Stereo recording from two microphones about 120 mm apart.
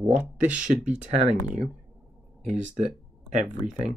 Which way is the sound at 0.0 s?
15° right (ahead or behind).